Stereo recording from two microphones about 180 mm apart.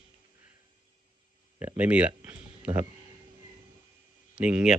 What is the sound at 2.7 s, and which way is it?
Speech, 30° right (ahead or behind).